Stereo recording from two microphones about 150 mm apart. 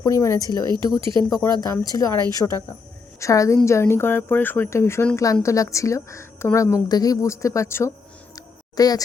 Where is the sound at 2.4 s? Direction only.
5° left (ahead or behind).